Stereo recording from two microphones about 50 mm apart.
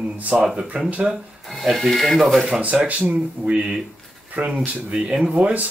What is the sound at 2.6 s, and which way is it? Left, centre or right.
Speech, right.